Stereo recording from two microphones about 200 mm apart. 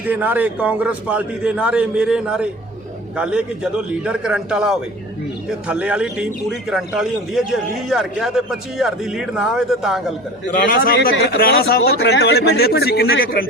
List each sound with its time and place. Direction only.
0.1 s a man's voice: 10° right (ahead or behind)
10.8 s speech: 50° left (ahead or behind)